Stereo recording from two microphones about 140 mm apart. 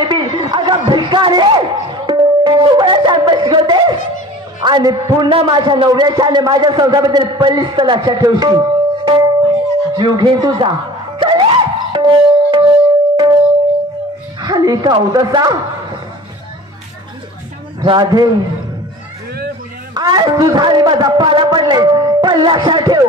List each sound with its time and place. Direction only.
0.0 s a sound: 35° right (ahead or behind)
4.6 s a man's voice: 30° right (ahead or behind)
11.1 s music: 35° right (ahead or behind)
14.4 s speech: 30° right (ahead or behind)
17.8 s a man's voice: 30° right (ahead or behind)
19.9 s a man's voice: 30° right (ahead or behind)